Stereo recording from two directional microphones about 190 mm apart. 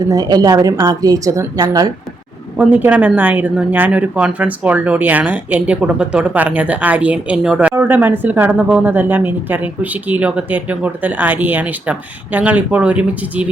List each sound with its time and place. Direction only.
0.1 s a woman's voice: 20° right (ahead or behind)
2.6 s speech: 10° right (ahead or behind)